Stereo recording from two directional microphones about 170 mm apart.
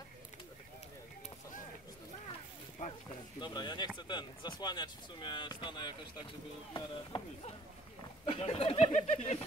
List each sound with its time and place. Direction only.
3.3 s speech: 25° left (ahead or behind)
8.3 s speech: 35° left (ahead or behind)